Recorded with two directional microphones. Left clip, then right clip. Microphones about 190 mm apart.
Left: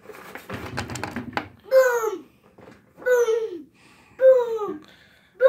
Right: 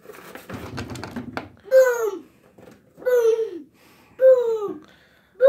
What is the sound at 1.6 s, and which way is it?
Babbling, 25° right (ahead or behind).